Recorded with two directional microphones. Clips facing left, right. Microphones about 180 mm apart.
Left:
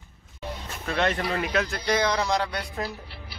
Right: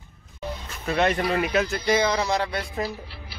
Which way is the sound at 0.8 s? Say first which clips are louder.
Right 3 dB; 10° right (ahead or behind).